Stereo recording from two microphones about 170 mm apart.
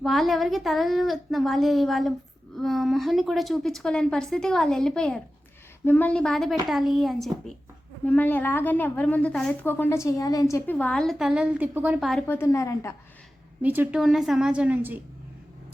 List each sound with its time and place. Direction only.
0.0 s a woman's voice: centre (ahead or behind)
12.3 s a woman's voice: 15° left (ahead or behind)
13.6 s a woman's voice: 10° right (ahead or behind)